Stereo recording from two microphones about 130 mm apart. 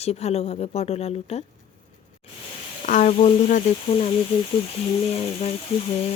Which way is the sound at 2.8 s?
80° left.